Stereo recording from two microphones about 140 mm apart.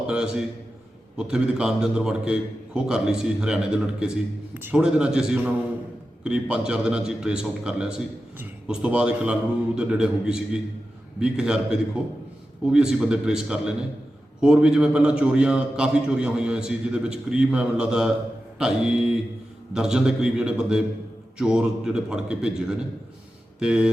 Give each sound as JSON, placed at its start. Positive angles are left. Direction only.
{"t": 0.1, "sound": "a man's voice", "side_deg": -5}